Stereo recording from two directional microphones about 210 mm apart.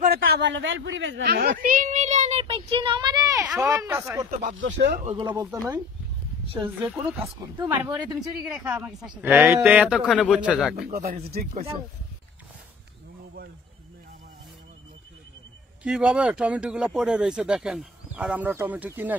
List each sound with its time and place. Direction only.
0.0 s a woman's voice: 45° right (ahead or behind); by 4.0 s 15° right (ahead or behind)
4.6 s speech: 55° right (ahead or behind)
5.0 s speech: 25° right (ahead or behind)
6.9 s speech: 10° right (ahead or behind)
7.5 s speech: 20° right (ahead or behind)
7.8 s speech: 5° right (ahead or behind)
10.8 s speech: 45° right (ahead or behind)
15.8 s speech: 5° right (ahead or behind)